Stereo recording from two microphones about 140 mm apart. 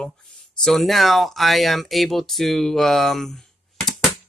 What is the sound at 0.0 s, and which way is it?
A man's voice, 5° left (ahead or behind).